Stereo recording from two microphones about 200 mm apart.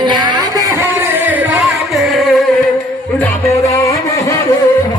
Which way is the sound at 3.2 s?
10° left (ahead or behind).